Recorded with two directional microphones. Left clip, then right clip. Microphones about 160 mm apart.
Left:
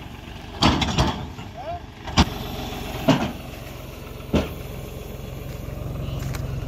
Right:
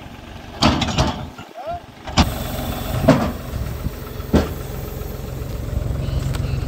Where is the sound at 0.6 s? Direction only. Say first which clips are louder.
Right 2 dB; 15° right (ahead or behind).